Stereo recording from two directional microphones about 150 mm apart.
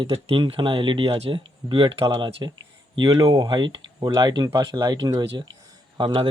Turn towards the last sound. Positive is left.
turn(degrees=-35)  # may be behind; listen again after turning